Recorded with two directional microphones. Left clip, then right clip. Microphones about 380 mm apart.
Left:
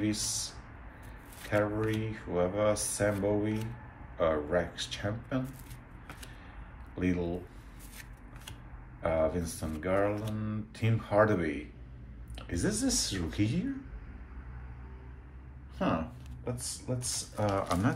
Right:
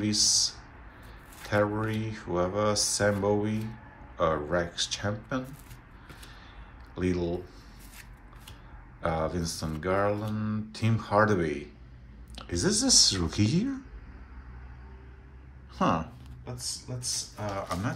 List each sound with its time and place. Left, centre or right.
0.0 s speech: centre
1.5 s speech: centre
7.0 s speech: centre
9.0 s speech: centre
16.4 s speech: centre